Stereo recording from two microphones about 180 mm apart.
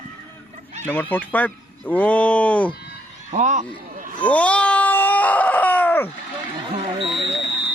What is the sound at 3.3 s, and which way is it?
Speech, 40° right (ahead or behind).